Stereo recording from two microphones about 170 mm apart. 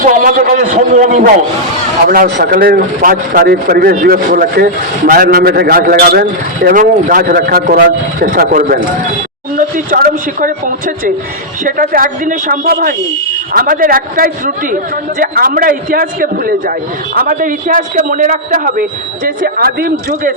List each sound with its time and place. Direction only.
0.0 s a man's voice: 60° right (ahead or behind)
0.5 s a man's voice: 45° right (ahead or behind)